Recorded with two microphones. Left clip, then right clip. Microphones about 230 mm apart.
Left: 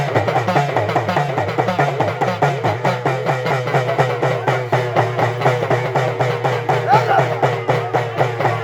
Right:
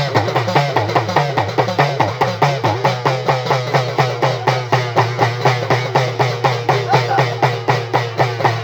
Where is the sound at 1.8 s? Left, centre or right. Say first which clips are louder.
Right 2 dB; right.